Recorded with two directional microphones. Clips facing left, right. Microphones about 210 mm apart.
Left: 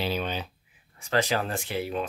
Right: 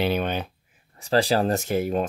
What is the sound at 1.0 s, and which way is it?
Speech, 35° right (ahead or behind).